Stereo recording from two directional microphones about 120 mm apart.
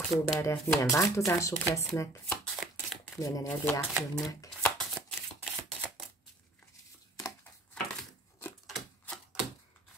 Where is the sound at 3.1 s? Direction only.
30° left (ahead or behind).